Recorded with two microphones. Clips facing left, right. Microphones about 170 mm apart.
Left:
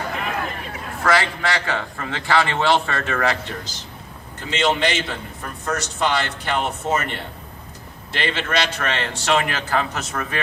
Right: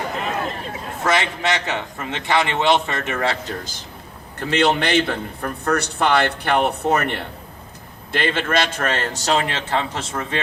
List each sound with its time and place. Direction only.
0.2 s a man's voice: 25° right (ahead or behind)
4.4 s a man's voice: 65° right (ahead or behind)
8.1 s a man's voice: 50° right (ahead or behind); by 10.4 s 25° right (ahead or behind)